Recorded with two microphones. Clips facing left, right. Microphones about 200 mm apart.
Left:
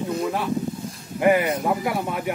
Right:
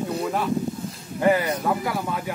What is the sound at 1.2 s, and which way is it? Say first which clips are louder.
Speech: left 2 dB; 15° left (ahead or behind).